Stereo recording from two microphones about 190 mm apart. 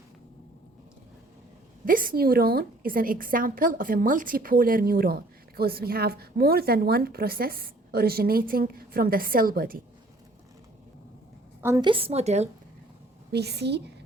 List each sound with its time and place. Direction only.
1.8 s a woman's voice: 45° right (ahead or behind)
11.6 s a woman's voice: 15° right (ahead or behind)
11.9 s a woman's voice: 30° right (ahead or behind)
13.3 s a woman's voice: 60° right (ahead or behind)